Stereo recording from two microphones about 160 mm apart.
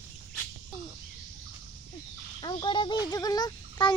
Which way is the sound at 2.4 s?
30° left (ahead or behind).